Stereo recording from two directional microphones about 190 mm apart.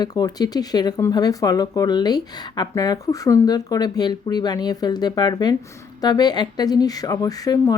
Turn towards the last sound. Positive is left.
turn(degrees=20)  # may be behind; listen again after turning